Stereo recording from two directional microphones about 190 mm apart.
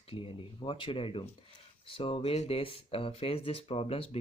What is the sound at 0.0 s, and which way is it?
Speech, 30° left (ahead or behind).